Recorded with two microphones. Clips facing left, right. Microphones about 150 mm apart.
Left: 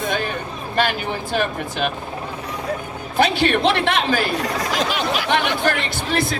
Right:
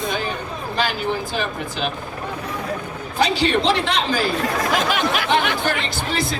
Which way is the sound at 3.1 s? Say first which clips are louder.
Left 1 dB; 55° left (ahead or behind).